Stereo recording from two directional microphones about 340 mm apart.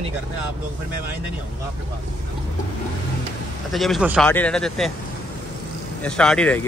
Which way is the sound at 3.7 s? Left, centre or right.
Centre.